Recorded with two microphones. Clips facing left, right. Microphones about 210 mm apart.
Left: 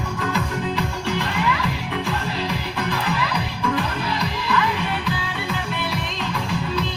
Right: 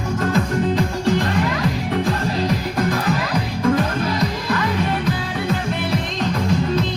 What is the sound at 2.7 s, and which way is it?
Music, 45° right (ahead or behind).